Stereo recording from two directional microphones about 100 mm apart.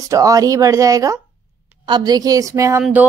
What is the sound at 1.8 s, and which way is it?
A woman's voice, 45° right (ahead or behind).